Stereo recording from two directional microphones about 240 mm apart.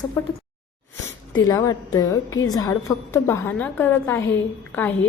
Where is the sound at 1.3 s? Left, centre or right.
Centre.